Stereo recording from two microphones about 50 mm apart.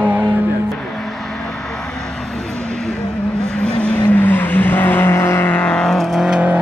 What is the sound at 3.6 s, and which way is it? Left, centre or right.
Vehicle, left.